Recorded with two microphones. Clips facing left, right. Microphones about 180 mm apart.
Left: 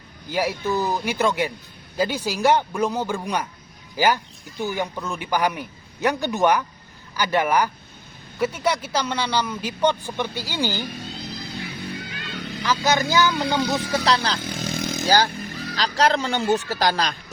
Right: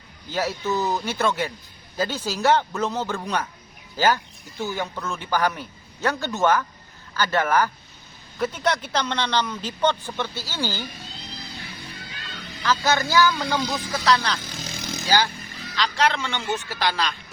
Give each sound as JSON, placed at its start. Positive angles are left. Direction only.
{"t": 0.3, "sound": "speech", "side_deg": 10}
{"t": 11.3, "sound": "music", "side_deg": 60}
{"t": 12.6, "sound": "speech", "side_deg": 15}
{"t": 14.4, "sound": "motorcycle", "side_deg": 55}
{"t": 15.7, "sound": "speech", "side_deg": 40}